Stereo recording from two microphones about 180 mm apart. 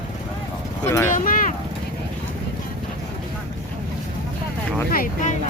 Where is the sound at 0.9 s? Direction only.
15° left (ahead or behind).